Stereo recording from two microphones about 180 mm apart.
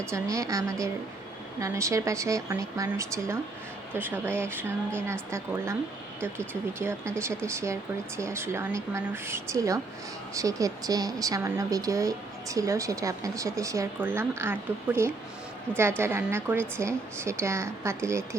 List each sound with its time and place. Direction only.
0.1 s speech: 15° right (ahead or behind)
6.7 s speech: 15° right (ahead or behind)